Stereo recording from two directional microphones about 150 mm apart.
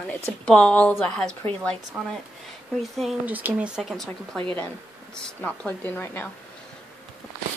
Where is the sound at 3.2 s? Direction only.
10° right (ahead or behind); by 6.3 s 10° left (ahead or behind).